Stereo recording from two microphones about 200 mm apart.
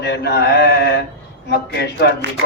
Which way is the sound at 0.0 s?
55° left (ahead or behind).